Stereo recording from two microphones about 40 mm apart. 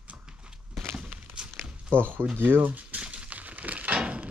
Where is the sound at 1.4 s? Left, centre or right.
Right.